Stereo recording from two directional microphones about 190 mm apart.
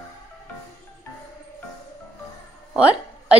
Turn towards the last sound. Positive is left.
turn(degrees=-5)  # may be behind; listen again after turning